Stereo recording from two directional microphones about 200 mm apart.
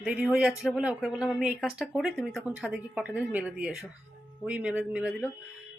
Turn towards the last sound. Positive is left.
turn(degrees=-5)  # may be behind; listen again after turning